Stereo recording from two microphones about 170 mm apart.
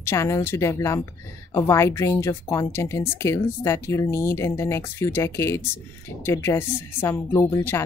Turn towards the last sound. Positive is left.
turn(degrees=15)  # may be behind; listen again after turning